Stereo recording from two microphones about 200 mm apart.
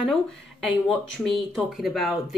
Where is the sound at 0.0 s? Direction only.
Centre (ahead or behind).